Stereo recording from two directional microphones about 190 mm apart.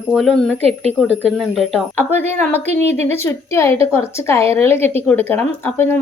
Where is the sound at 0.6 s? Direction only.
35° right (ahead or behind).